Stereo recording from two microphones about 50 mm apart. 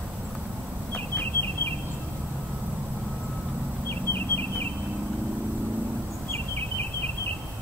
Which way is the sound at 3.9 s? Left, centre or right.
Left.